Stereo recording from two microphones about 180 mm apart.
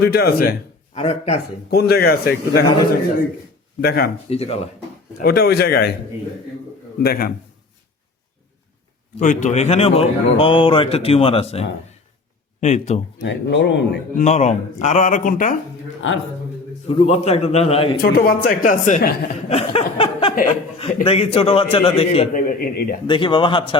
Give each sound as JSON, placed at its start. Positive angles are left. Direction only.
{"t": 0.0, "sound": "a man's voice", "side_deg": 60}
{"t": 0.9, "sound": "a man's voice", "side_deg": 35}
{"t": 1.7, "sound": "a man's voice", "side_deg": 60}
{"t": 4.3, "sound": "a man's voice", "side_deg": 35}
{"t": 5.1, "sound": "a man's voice", "side_deg": 60}
{"t": 7.0, "sound": "a man's voice", "side_deg": 55}
{"t": 9.1, "sound": "a man's voice", "side_deg": 45}
{"t": 13.2, "sound": "speech", "side_deg": 75}
{"t": 14.2, "sound": "speech", "side_deg": 40}
{"t": 16.9, "sound": "a man's voice", "side_deg": 30}
{"t": 18.0, "sound": "a man's voice", "side_deg": 55}
{"t": 22.4, "sound": "speech", "side_deg": 50}
{"t": 23.0, "sound": "speech", "side_deg": 25}